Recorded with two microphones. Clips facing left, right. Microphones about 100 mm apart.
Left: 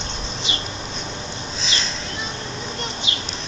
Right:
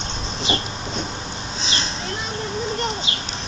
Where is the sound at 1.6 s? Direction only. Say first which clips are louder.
Right 1 dB; 40° right (ahead or behind).